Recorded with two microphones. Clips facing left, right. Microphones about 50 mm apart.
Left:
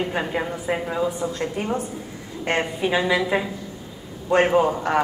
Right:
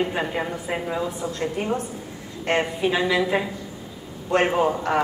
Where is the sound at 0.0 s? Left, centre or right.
Centre.